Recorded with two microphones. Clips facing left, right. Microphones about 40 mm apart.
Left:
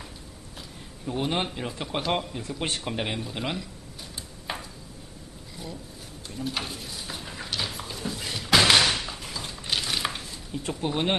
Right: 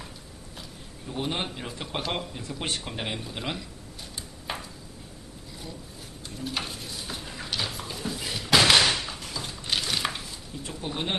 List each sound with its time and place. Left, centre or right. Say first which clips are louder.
1.0 s a man's voice: left 3 dB; centre
4.5 s a sound: even; centre
6.2 s pigeon: left 1 dB; centre
8.9 s a sound: even; centre
10.6 s speech: left 6 dB; left
10.8 s speech: left 5 dB; centre